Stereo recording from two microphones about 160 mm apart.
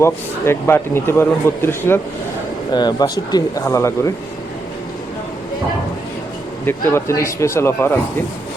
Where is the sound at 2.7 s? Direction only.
25° left (ahead or behind).